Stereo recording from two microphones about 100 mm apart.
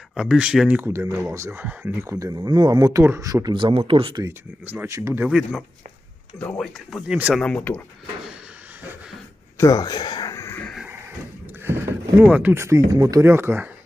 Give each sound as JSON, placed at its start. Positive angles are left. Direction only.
{"t": 0.1, "sound": "speech", "side_deg": -5}
{"t": 0.8, "sound": "speech", "side_deg": -25}
{"t": 3.5, "sound": "speech", "side_deg": -55}
{"t": 4.1, "sound": "speech", "side_deg": -35}
{"t": 4.6, "sound": "speech", "side_deg": -20}
{"t": 4.9, "sound": "speech", "side_deg": -30}
{"t": 5.3, "sound": "speech", "side_deg": -5}
{"t": 7.1, "sound": "speech", "side_deg": -15}
{"t": 7.3, "sound": "speech", "side_deg": 10}
{"t": 9.6, "sound": "speech", "side_deg": 35}
{"t": 10.3, "sound": "a sound", "side_deg": 30}
{"t": 11.6, "sound": "speech", "side_deg": -25}